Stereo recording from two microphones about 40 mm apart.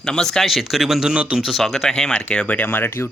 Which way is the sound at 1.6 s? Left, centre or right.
Centre.